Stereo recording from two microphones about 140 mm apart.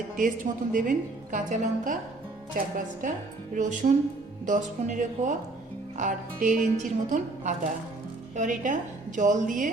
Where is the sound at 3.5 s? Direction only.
65° right (ahead or behind).